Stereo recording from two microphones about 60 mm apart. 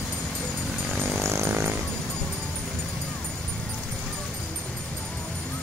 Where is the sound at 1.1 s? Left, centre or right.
Right.